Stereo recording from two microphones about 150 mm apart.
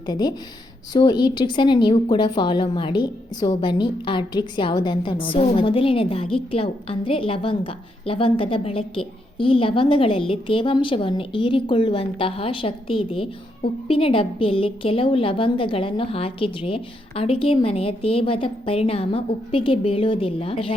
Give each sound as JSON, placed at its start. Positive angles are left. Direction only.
{"t": 0.0, "sound": "a woman's voice", "side_deg": 30}